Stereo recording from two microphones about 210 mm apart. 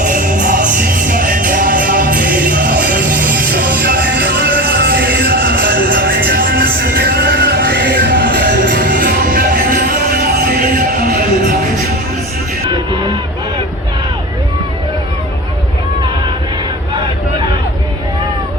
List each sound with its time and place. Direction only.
0.0 s music: 40° right (ahead or behind)